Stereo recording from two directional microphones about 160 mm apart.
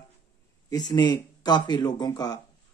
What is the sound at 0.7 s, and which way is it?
Speech, 25° left (ahead or behind).